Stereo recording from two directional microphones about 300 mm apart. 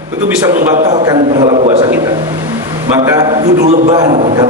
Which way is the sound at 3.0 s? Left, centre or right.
Centre.